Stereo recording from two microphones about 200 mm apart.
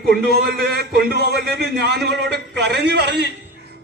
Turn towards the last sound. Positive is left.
turn(degrees=-55)  # may be behind; listen again after turning